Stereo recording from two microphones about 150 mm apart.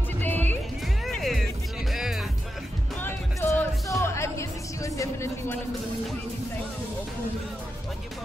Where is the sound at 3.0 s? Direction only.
15° left (ahead or behind).